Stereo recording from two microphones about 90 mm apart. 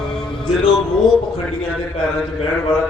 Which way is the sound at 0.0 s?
5° left (ahead or behind).